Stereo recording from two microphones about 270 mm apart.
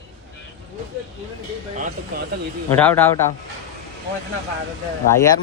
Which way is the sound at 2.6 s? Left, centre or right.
Centre.